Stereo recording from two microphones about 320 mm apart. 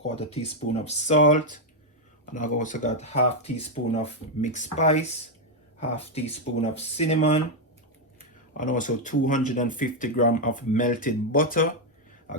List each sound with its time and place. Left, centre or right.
0.2 s speech: centre
8.5 s speech: left